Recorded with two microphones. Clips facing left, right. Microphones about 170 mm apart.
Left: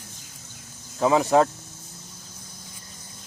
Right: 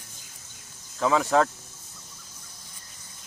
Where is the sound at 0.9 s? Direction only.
20° left (ahead or behind).